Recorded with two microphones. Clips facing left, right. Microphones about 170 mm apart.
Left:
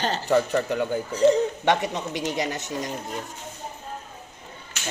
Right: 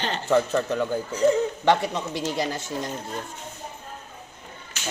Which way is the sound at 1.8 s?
20° left (ahead or behind).